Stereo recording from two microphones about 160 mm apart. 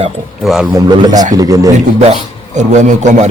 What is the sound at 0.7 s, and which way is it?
A man's voice, 25° right (ahead or behind).